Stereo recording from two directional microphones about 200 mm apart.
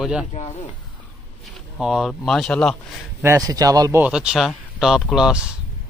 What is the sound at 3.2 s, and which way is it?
Speech, 15° right (ahead or behind).